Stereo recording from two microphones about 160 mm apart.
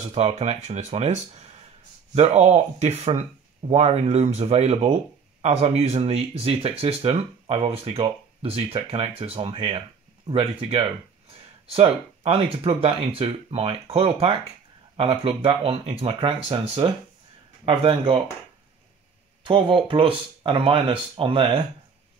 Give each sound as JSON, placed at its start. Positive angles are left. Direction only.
{"t": 0.1, "sound": "speech", "side_deg": -40}
{"t": 19.4, "sound": "speech", "side_deg": -30}